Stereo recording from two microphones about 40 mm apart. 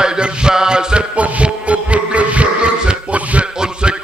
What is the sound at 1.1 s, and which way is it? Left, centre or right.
Music, right.